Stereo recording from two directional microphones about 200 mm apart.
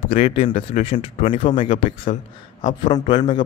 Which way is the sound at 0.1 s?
30° left (ahead or behind).